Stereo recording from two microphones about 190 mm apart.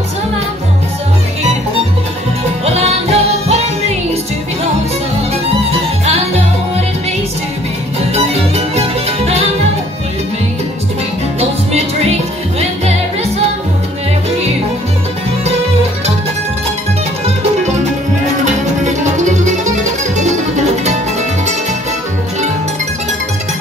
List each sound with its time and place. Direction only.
2.6 s music: 35° right (ahead or behind)
5.3 s music: 35° right (ahead or behind)
8.1 s music: 35° right (ahead or behind)
11.3 s music: 35° right (ahead or behind)
18.4 s music: 40° right (ahead or behind)